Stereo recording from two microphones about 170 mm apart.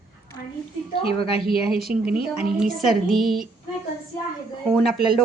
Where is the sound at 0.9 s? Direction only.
35° left (ahead or behind).